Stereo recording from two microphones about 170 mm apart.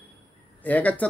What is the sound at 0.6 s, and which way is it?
Speech, 10° left (ahead or behind).